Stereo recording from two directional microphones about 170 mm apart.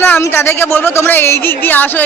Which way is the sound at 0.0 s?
15° left (ahead or behind).